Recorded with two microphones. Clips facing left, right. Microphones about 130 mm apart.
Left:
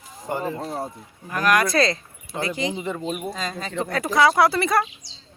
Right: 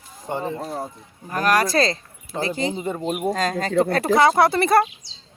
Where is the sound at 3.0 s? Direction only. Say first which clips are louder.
Right 6 dB; 55° right (ahead or behind).